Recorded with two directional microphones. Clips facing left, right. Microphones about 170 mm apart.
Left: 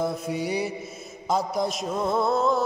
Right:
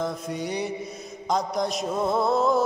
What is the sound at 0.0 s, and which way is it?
Mantra, 10° left (ahead or behind).